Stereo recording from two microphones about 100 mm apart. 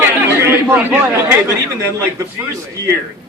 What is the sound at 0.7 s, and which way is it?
Speech, 15° right (ahead or behind).